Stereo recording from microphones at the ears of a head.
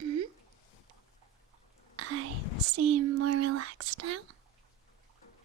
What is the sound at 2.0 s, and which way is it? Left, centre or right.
Whispering, right.